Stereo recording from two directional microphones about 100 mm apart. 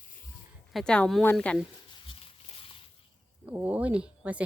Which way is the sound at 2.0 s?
65° left (ahead or behind).